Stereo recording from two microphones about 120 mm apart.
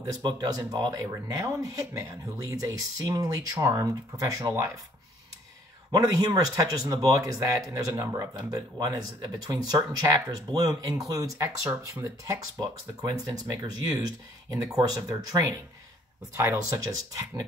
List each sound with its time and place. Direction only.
0.0 s speech: 30° right (ahead or behind)
5.9 s speech: 30° right (ahead or behind)